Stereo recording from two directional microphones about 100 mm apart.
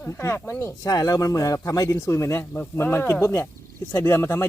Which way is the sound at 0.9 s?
35° left (ahead or behind).